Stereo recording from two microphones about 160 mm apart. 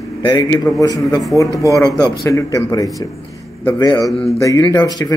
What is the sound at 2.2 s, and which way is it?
Speech, 20° left (ahead or behind).